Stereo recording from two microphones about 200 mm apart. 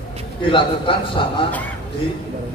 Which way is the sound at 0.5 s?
25° left (ahead or behind).